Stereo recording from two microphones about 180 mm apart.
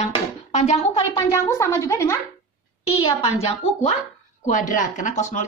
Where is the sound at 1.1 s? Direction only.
15° left (ahead or behind).